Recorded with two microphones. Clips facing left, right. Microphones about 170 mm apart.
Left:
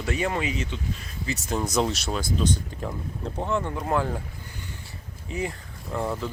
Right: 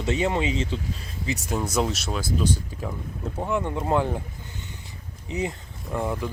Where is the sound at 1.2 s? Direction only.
10° right (ahead or behind).